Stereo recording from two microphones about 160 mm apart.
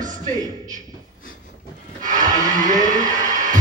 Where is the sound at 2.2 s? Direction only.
25° right (ahead or behind).